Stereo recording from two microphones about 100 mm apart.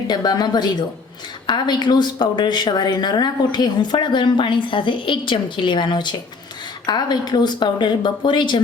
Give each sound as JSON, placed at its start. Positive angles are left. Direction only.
{"t": 0.1, "sound": "a woman's voice", "side_deg": 45}